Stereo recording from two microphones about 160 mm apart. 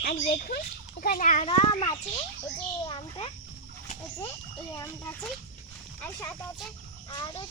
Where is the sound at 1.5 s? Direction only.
30° left (ahead or behind).